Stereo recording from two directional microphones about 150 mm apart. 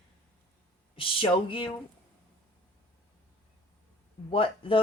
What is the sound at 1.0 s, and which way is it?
Speech, 35° left (ahead or behind).